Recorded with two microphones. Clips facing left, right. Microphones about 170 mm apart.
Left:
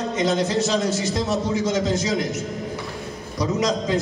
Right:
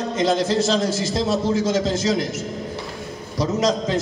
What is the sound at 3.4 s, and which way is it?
Speech, 25° right (ahead or behind).